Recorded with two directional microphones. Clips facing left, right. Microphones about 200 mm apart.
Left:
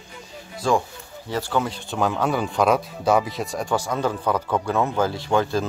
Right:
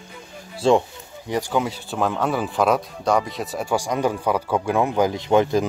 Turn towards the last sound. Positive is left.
turn(degrees=-20)  # may be behind; listen again after turning